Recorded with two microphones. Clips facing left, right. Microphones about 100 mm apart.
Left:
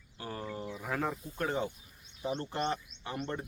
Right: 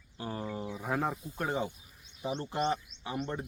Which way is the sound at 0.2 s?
20° right (ahead or behind).